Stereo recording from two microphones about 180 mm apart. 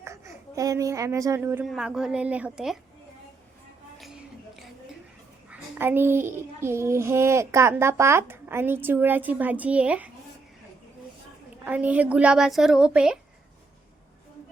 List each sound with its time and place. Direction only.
0.0 s a woman's voice: 15° right (ahead or behind)
1.6 s a woman's voice: centre (ahead or behind)
3.9 s a sound: centre (ahead or behind)
5.5 s a child's voice: 10° right (ahead or behind)
11.6 s a woman's voice: 10° right (ahead or behind)